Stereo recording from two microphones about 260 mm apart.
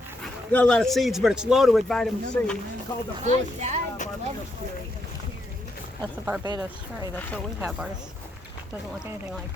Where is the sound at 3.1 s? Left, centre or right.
Right.